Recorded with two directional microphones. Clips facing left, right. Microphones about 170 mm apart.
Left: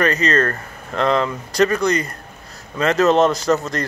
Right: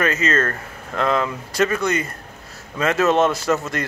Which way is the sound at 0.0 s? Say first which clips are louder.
Left 2 dB; 5° right (ahead or behind).